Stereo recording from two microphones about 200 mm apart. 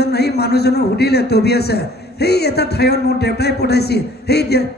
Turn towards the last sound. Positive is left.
turn(degrees=55)  # may be behind; listen again after turning